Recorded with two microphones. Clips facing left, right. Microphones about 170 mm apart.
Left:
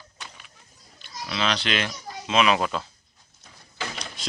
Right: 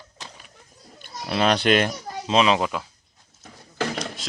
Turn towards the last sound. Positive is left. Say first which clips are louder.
# left 1 dB
turn(degrees=0)  # may be behind; listen again after turning